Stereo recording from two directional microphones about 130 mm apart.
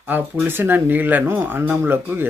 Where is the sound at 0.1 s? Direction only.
15° right (ahead or behind).